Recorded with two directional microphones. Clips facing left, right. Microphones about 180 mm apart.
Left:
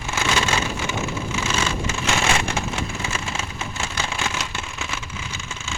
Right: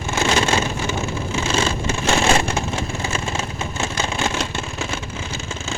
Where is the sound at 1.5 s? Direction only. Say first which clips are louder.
Right 5 dB; 30° right (ahead or behind).